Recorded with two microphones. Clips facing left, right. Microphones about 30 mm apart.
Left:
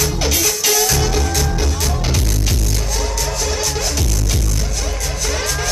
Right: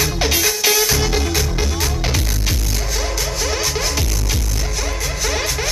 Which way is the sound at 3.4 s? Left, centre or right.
Centre.